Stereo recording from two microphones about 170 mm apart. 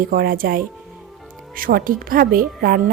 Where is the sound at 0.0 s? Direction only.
60° right (ahead or behind).